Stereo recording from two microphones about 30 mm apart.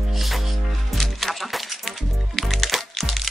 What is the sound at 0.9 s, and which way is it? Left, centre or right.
Music, centre.